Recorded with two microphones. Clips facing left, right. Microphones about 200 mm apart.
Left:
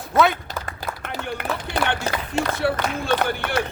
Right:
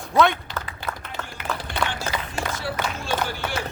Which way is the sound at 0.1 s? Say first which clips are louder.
Even; 5° left (ahead or behind).